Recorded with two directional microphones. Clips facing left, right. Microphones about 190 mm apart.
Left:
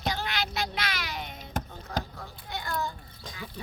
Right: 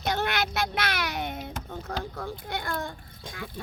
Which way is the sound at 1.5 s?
45° left (ahead or behind).